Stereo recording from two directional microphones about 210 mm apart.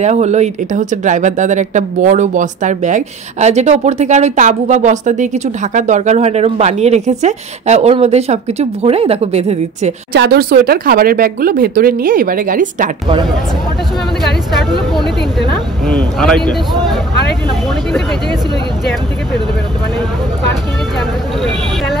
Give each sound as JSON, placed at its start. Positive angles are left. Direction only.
{"t": 0.0, "sound": "speech", "side_deg": -35}
{"t": 10.1, "sound": "speech", "side_deg": -50}
{"t": 14.2, "sound": "speech", "side_deg": 0}